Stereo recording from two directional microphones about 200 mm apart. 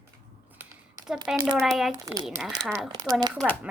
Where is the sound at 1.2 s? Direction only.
5° right (ahead or behind).